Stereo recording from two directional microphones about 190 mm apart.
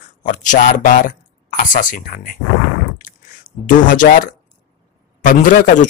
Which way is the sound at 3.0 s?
45° left (ahead or behind).